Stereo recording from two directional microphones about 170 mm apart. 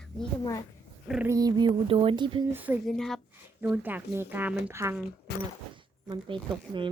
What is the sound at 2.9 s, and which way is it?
Speech, centre (ahead or behind).